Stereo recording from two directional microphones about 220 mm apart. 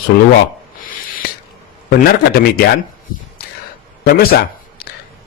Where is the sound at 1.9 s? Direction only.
45° left (ahead or behind).